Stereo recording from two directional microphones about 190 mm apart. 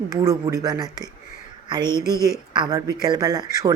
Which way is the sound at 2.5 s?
20° right (ahead or behind).